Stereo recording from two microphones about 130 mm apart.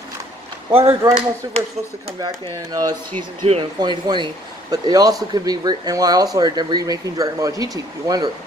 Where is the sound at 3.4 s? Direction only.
40° right (ahead or behind).